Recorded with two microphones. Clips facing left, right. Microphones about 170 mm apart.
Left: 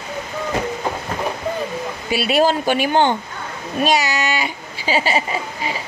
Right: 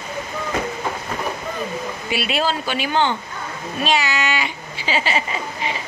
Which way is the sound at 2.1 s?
40° left (ahead or behind).